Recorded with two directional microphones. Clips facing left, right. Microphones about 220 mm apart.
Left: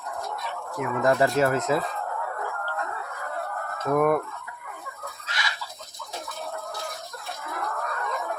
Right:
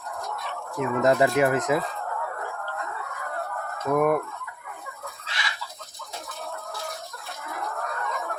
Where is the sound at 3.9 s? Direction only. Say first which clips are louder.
Even; 5° right (ahead or behind).